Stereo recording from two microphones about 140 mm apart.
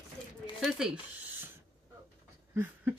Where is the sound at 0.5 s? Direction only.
5° right (ahead or behind).